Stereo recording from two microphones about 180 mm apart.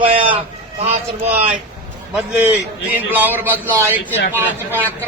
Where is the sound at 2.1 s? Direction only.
10° right (ahead or behind).